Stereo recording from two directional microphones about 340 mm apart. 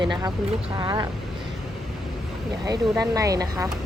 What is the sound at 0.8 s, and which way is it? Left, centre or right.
Speech, centre.